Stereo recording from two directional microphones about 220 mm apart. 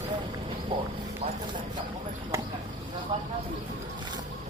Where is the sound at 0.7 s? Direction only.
20° right (ahead or behind).